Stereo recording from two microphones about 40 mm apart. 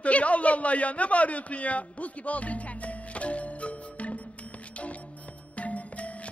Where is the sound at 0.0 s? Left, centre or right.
Left.